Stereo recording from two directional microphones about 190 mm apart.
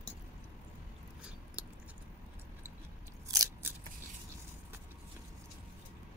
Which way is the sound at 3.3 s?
15° right (ahead or behind).